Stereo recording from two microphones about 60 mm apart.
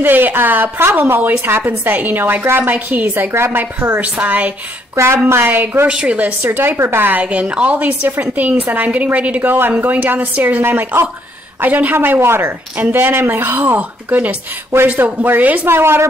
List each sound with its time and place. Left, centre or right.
0.0 s speech: right
3.3 s a woman's voice: right
4.0 s a woman's voice: right
4.9 s a woman's voice: right
5.4 s speech: right
5.9 s a woman's voice: centre
6.8 s a woman's voice: right
7.1 s a woman's voice: right
13.7 s a woman's voice: right
15.6 s a woman's voice: right